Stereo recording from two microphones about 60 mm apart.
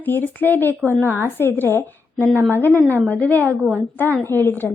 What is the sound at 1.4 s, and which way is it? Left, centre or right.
A woman's voice, left.